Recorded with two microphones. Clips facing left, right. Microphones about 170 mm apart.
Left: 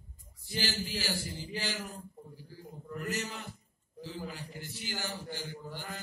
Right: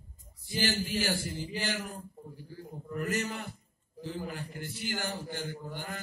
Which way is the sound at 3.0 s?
55° right (ahead or behind).